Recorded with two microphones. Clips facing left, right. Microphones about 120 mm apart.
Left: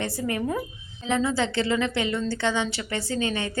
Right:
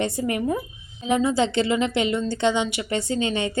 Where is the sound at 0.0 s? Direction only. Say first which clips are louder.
Right 3 dB; 20° right (ahead or behind).